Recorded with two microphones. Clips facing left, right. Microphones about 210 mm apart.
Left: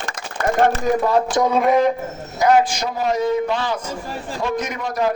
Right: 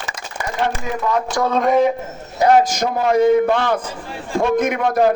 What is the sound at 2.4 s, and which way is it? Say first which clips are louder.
A man's voice: right 2 dB; 40° right (ahead or behind).